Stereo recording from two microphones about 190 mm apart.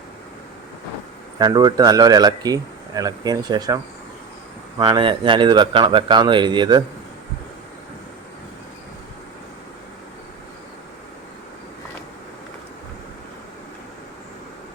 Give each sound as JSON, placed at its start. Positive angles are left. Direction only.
{"t": 1.4, "sound": "a man's voice", "side_deg": -20}
{"t": 4.8, "sound": "a man's voice", "side_deg": -25}